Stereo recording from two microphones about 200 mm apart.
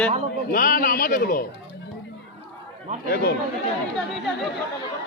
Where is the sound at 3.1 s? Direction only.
50° left (ahead or behind).